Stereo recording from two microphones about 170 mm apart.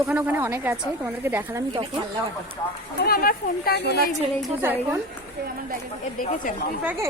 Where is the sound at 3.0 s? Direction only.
65° left (ahead or behind).